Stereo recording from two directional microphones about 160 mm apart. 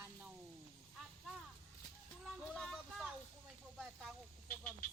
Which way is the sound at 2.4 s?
5° left (ahead or behind).